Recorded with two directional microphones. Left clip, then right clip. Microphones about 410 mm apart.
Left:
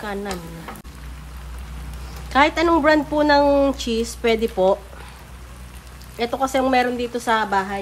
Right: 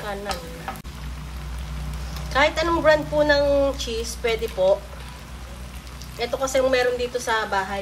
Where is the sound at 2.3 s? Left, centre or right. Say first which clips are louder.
Left 4 dB; centre.